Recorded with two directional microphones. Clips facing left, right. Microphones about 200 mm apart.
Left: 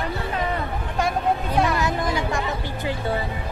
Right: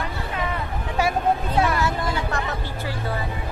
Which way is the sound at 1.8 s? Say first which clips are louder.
Left 1 dB; 15° left (ahead or behind).